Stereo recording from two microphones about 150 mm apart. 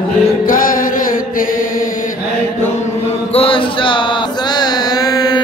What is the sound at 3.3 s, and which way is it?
Mantra, 35° left (ahead or behind).